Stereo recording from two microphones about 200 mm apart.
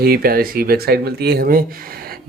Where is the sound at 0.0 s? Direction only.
50° right (ahead or behind).